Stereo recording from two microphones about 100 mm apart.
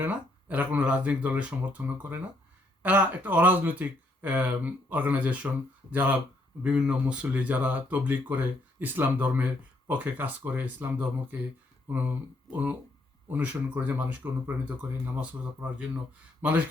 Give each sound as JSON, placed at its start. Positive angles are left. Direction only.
{"t": 0.0, "sound": "speech", "side_deg": -15}
{"t": 16.4, "sound": "speech", "side_deg": -15}